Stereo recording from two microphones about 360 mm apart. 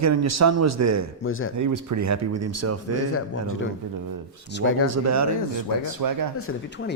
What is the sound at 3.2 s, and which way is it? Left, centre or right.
Speech, left.